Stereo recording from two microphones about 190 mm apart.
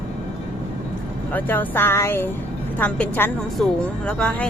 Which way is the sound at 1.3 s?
10° left (ahead or behind).